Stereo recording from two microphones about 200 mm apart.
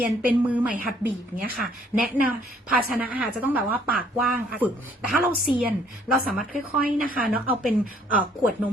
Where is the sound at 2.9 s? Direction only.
5° right (ahead or behind).